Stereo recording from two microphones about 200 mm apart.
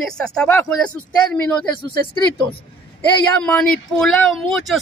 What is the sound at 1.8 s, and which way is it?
Speech, 25° left (ahead or behind).